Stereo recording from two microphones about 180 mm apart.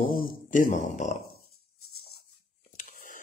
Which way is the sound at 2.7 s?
50° left (ahead or behind).